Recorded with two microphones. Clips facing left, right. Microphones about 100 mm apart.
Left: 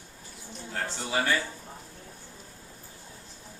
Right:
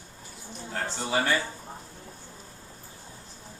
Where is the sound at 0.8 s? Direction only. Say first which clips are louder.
Right 2 dB; 25° right (ahead or behind).